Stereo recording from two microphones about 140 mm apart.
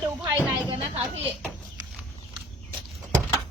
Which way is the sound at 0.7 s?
45° right (ahead or behind).